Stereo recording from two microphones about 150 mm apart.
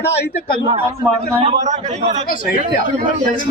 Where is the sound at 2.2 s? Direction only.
70° left (ahead or behind).